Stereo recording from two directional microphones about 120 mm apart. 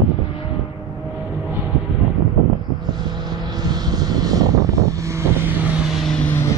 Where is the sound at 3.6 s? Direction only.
35° right (ahead or behind).